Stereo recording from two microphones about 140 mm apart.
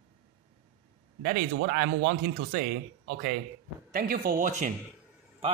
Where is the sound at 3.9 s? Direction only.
90° right; by 4.7 s 65° right (ahead or behind).